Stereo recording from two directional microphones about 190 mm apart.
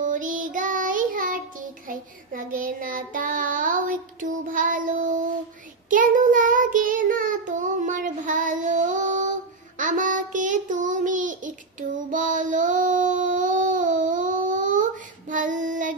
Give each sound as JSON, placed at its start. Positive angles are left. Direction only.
{"t": 0.0, "sound": "child singing", "side_deg": -45}